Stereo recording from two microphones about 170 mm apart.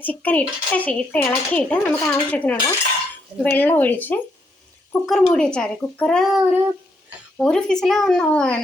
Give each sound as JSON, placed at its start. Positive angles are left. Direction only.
{"t": 0.0, "sound": "a child's voice", "side_deg": 10}